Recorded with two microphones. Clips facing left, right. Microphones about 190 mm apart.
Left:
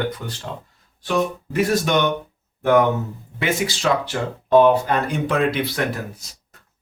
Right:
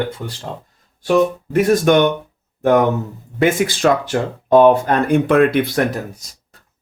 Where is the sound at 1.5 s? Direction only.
50° right (ahead or behind).